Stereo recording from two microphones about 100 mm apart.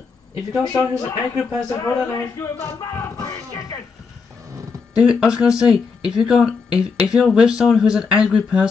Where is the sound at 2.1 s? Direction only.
30° left (ahead or behind).